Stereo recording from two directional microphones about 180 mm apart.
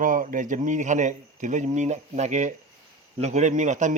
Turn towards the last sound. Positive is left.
turn(degrees=-45)  # may be behind; listen again after turning